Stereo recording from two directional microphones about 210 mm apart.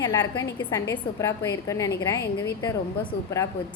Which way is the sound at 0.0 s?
20° left (ahead or behind).